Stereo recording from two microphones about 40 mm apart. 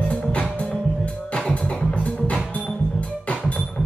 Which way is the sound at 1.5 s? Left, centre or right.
Left.